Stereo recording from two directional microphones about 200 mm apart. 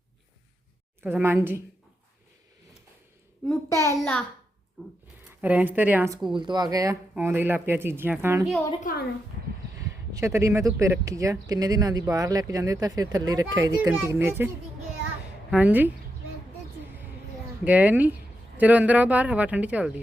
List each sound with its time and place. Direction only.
1.0 s speech: 10° right (ahead or behind)
3.5 s a child's voice: 15° left (ahead or behind)
5.4 s speech: 10° right (ahead or behind)
6.3 s speech: 20° right (ahead or behind)
8.8 s a woman's voice: 45° left (ahead or behind)
10.1 s a woman's voice: 15° right (ahead or behind)
17.7 s speech: 10° right (ahead or behind)